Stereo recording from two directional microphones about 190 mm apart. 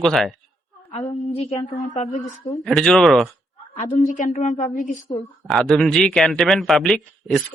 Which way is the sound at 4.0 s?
40° left (ahead or behind).